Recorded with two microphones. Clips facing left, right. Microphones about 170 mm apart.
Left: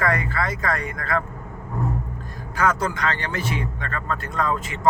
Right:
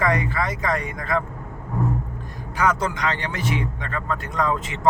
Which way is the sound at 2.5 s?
15° right (ahead or behind).